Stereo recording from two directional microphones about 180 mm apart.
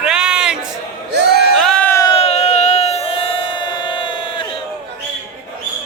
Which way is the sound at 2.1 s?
35° left (ahead or behind).